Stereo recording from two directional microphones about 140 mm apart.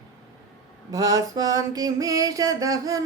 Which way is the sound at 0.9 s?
25° right (ahead or behind).